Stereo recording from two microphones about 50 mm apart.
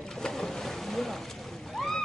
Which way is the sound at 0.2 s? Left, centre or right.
Centre.